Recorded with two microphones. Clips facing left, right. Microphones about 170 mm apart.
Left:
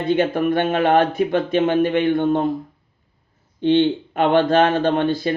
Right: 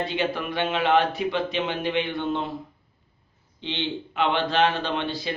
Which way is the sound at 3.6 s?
50° left (ahead or behind).